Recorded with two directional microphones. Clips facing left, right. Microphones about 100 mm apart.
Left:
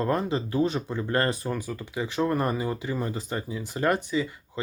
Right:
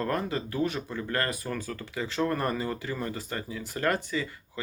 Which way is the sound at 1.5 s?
15° left (ahead or behind).